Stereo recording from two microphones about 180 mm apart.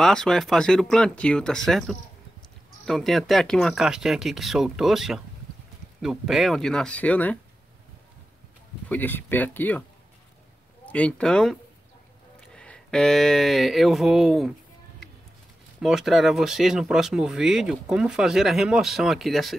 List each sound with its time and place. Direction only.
0.0 s speech: 5° left (ahead or behind)
8.8 s speech: 10° left (ahead or behind)
10.9 s speech: 5° left (ahead or behind)
12.5 s speech: 5° left (ahead or behind)
15.8 s speech: centre (ahead or behind)